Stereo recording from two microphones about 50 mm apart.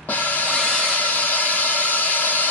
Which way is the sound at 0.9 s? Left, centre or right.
Left.